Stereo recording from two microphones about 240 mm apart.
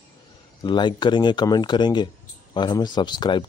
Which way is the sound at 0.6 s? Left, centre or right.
Centre.